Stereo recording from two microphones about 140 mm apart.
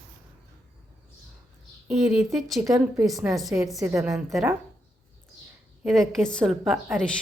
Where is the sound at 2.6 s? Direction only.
25° right (ahead or behind).